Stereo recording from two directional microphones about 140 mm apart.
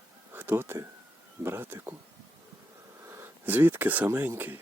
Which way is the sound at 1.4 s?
15° right (ahead or behind).